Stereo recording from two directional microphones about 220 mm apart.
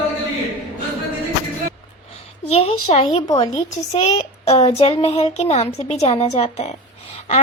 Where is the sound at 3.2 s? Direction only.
15° left (ahead or behind).